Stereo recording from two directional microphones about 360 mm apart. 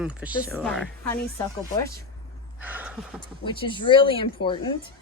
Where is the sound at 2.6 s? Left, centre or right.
Centre.